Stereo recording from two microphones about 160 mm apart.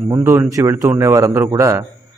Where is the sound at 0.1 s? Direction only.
15° right (ahead or behind).